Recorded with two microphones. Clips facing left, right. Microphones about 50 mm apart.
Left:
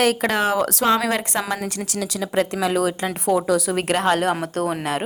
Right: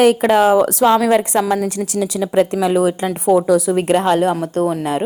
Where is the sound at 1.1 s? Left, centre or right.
Centre.